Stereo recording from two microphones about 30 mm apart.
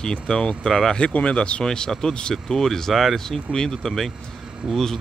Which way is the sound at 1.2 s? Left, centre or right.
Left.